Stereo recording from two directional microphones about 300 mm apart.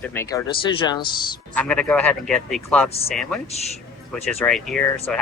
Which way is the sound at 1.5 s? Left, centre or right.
Centre.